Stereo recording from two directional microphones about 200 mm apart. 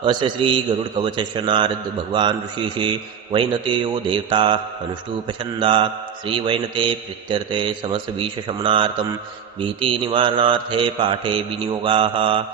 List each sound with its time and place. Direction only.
0.0 s a man's voice: 25° right (ahead or behind)
3.3 s a man's voice: 25° right (ahead or behind)